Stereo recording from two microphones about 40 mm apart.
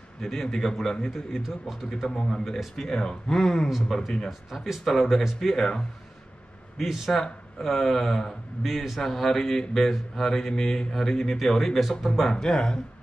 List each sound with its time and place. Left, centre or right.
0.2 s speech: centre
1.4 s speech: centre
2.0 s speech: centre
2.4 s speech: centre
2.7 s speech: centre
4.3 s speech: centre
6.8 s speech: centre
8.6 s speech: centre